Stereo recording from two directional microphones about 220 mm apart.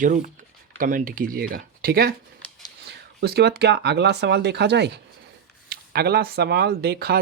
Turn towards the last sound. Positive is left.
turn(degrees=-45)  # may be behind; listen again after turning